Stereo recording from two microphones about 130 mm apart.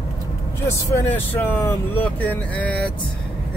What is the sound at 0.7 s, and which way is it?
Speech, 15° left (ahead or behind).